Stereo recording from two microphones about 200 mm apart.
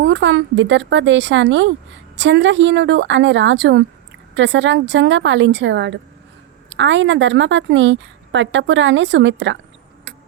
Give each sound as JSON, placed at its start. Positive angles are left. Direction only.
{"t": 0.0, "sound": "a woman's voice", "side_deg": -65}